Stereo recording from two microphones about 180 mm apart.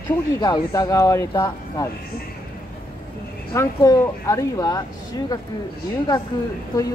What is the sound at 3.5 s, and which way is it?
Speech, 15° left (ahead or behind).